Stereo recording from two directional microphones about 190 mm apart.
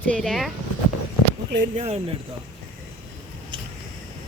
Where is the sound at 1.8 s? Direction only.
35° right (ahead or behind).